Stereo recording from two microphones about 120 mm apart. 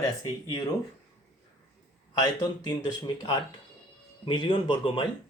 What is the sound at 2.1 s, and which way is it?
Speech, 35° left (ahead or behind).